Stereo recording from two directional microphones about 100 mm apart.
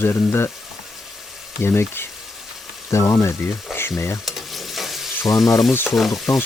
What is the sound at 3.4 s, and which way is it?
Frying, 20° left (ahead or behind).